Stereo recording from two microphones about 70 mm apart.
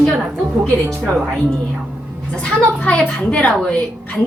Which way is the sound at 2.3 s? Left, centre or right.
Centre.